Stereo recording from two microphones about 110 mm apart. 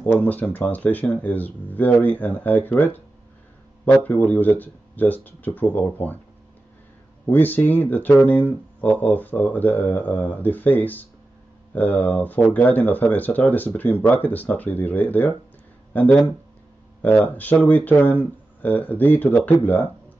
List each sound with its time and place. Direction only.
0.0 s speech: 15° left (ahead or behind)
4.0 s speech: 15° left (ahead or behind)
7.2 s speech: 15° left (ahead or behind)